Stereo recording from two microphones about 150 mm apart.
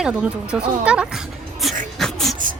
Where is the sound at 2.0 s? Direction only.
Centre (ahead or behind).